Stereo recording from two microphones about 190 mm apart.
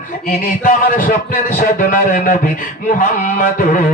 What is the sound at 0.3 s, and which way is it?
A man's voice, 50° left (ahead or behind).